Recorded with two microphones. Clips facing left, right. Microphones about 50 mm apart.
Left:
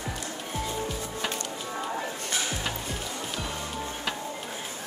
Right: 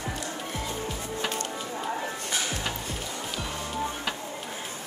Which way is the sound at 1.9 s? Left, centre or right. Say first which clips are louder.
Right 2 dB; right.